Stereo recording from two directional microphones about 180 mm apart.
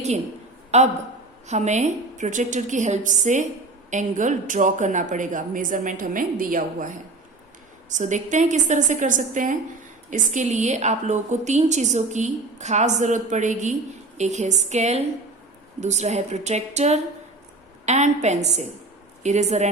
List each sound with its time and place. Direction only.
1.5 s a woman's voice: 40° right (ahead or behind)